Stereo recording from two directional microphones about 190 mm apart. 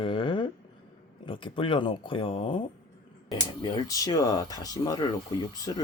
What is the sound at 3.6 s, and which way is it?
Speech, 25° left (ahead or behind).